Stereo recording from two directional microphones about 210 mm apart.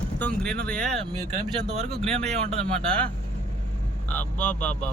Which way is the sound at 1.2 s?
30° right (ahead or behind).